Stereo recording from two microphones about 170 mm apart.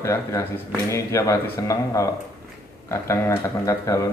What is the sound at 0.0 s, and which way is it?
Speech, 15° left (ahead or behind).